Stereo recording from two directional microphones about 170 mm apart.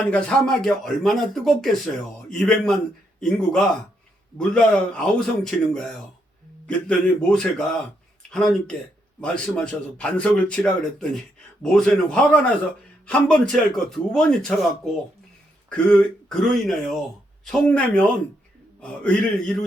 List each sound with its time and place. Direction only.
0.0 s a man's voice: 5° left (ahead or behind)
9.2 s a man's voice: 5° left (ahead or behind)
15.7 s a man's voice: 5° left (ahead or behind)